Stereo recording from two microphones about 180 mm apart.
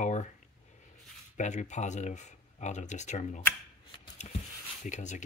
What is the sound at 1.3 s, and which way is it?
Speech, 40° left (ahead or behind).